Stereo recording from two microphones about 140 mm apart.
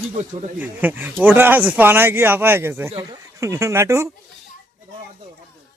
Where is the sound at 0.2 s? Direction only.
55° right (ahead or behind).